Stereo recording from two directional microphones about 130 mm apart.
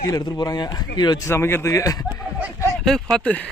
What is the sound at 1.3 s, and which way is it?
Speech, 20° left (ahead or behind).